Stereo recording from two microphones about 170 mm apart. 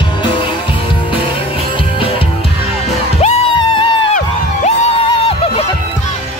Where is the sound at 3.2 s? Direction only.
30° left (ahead or behind).